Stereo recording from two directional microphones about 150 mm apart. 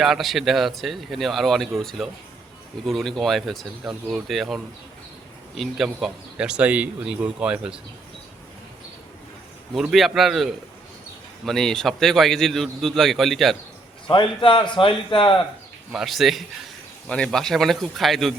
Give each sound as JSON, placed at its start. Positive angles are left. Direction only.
{"t": 0.0, "sound": "a man's voice", "side_deg": 0}
{"t": 9.7, "sound": "a man's voice", "side_deg": 0}
{"t": 14.1, "sound": "a man's voice", "side_deg": 35}
{"t": 15.9, "sound": "a man's voice", "side_deg": 0}